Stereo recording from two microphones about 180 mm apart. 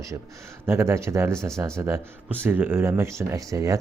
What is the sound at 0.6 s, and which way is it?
A man's voice, 15° right (ahead or behind).